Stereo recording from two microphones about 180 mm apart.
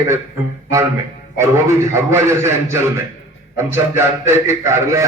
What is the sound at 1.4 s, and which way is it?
A man's voice, 15° right (ahead or behind).